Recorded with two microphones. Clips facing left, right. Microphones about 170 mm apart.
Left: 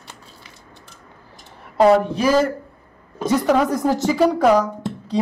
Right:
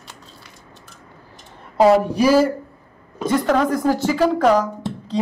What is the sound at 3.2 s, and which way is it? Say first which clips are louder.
Speech: left 1 dB; 5° left (ahead or behind).